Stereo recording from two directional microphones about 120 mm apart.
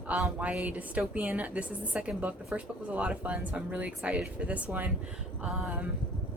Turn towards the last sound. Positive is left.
turn(degrees=-10)  # may be behind; listen again after turning